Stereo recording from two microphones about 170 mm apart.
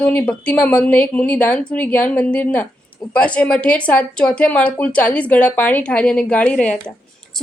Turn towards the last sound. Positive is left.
turn(degrees=5)  # may be behind; listen again after turning